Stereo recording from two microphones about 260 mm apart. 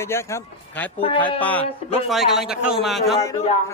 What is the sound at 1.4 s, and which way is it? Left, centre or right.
Speech, centre.